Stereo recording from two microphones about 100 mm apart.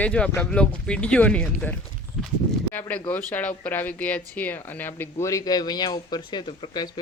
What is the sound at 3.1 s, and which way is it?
Speech, 15° left (ahead or behind).